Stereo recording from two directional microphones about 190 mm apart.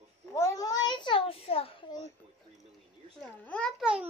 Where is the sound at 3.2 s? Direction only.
5° left (ahead or behind).